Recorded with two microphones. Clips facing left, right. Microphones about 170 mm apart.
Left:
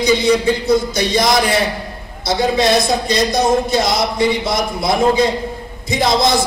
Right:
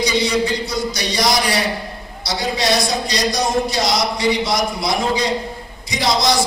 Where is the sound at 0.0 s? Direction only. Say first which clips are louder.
Left 5 dB; 50° left (ahead or behind).